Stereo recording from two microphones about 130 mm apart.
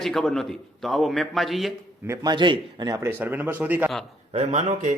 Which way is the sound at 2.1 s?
35° right (ahead or behind).